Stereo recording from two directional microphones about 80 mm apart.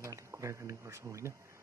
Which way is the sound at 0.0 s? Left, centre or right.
Right.